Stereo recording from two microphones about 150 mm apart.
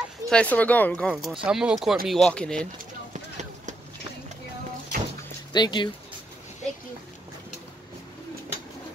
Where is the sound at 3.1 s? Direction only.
50° right (ahead or behind).